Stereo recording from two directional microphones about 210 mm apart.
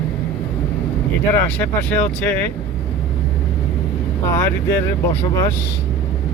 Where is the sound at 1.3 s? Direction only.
10° left (ahead or behind).